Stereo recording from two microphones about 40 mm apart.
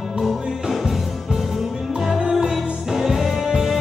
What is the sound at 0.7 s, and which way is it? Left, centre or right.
Music, centre.